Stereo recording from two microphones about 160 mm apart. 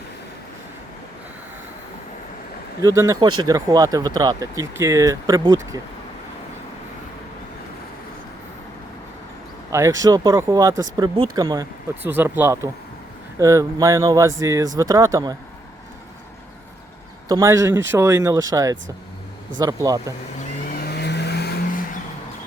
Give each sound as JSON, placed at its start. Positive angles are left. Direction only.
{"t": 2.8, "sound": "speech", "side_deg": -20}
{"t": 9.6, "sound": "speech", "side_deg": -20}
{"t": 12.0, "sound": "speech", "side_deg": -15}
{"t": 17.2, "sound": "speech", "side_deg": -20}
{"t": 20.4, "sound": "vehicle", "side_deg": 65}